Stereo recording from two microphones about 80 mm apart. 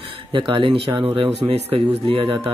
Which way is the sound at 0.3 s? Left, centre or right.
Right.